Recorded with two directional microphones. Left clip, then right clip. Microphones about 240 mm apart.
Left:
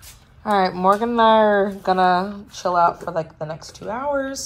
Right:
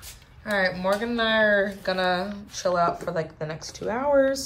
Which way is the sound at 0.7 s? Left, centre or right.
Centre.